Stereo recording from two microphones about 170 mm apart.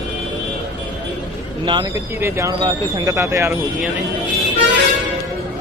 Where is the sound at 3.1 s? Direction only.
15° right (ahead or behind).